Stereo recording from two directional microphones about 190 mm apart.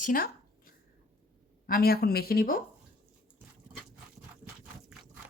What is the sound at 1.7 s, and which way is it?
Speech, 50° left (ahead or behind).